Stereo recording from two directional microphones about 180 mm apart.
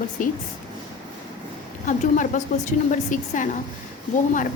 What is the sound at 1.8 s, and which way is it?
A woman's voice, 45° left (ahead or behind).